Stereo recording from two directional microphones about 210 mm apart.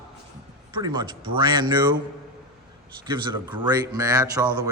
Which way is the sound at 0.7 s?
20° right (ahead or behind).